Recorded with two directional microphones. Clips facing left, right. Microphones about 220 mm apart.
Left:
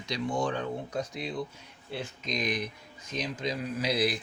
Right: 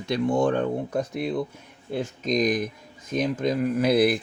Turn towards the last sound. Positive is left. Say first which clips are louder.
# right 9 dB
turn(degrees=-55)  # may be behind; listen again after turning